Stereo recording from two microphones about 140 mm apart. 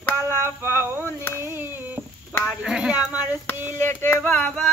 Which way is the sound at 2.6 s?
5° right (ahead or behind).